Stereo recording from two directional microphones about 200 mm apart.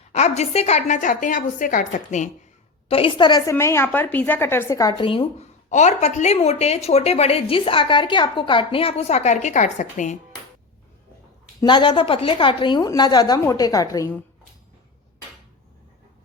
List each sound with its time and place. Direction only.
0.1 s a woman's voice: 35° left (ahead or behind)
2.9 s a woman's voice: 25° left (ahead or behind)
11.6 s a woman's voice: 20° left (ahead or behind)